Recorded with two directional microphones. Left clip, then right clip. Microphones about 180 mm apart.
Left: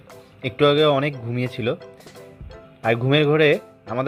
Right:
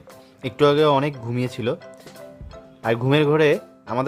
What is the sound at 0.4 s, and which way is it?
Speech, 15° right (ahead or behind).